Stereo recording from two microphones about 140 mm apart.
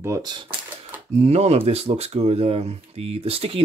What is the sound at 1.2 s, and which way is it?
Speech, 50° right (ahead or behind).